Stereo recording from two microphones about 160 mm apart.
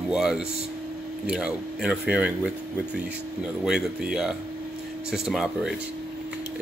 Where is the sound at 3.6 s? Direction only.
5° right (ahead or behind).